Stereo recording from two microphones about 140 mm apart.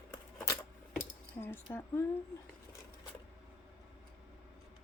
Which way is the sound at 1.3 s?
15° left (ahead or behind).